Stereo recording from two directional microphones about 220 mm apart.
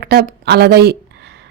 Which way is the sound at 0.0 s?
45° right (ahead or behind).